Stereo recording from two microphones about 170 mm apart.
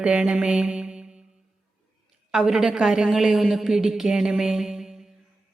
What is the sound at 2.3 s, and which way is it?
A woman's voice, centre (ahead or behind).